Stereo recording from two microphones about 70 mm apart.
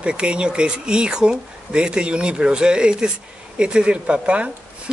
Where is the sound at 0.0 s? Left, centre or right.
Centre.